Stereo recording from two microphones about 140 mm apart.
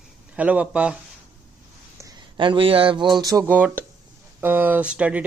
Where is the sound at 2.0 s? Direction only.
35° right (ahead or behind).